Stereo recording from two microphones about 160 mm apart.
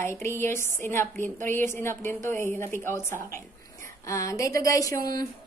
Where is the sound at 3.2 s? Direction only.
15° left (ahead or behind).